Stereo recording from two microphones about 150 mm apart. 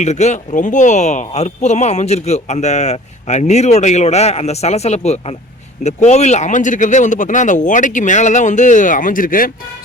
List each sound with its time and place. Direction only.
0.0 s speech: 50° left (ahead or behind); by 9.5 s 65° left (ahead or behind)